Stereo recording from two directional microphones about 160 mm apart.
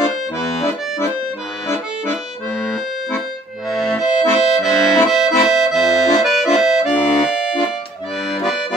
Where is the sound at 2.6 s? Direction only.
5° left (ahead or behind).